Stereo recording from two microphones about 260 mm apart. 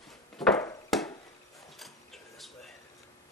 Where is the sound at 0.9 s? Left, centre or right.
Centre.